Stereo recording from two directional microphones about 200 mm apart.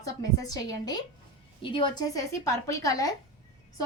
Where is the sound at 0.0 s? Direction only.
15° left (ahead or behind).